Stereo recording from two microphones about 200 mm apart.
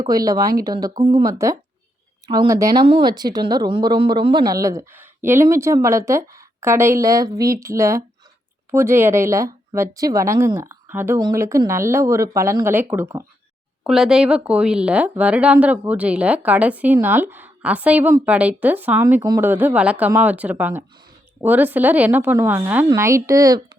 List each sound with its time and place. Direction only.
0.0 s a woman's voice: 20° right (ahead or behind)